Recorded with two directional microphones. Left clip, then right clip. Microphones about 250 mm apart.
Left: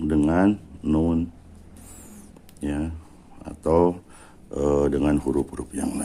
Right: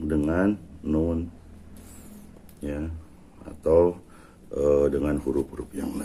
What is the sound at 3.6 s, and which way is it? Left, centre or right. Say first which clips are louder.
Speech: even; left.